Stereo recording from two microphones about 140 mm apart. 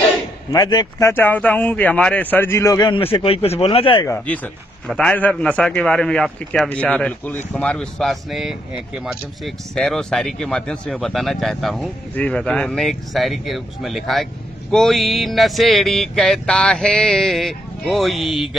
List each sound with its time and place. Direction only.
0.5 s speech: 30° left (ahead or behind)
1.0 s a man's voice: 15° left (ahead or behind)
3.0 s speech: 40° left (ahead or behind)
4.3 s a man's voice: 10° left (ahead or behind)